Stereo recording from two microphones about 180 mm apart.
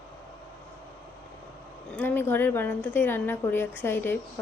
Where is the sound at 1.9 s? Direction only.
10° left (ahead or behind).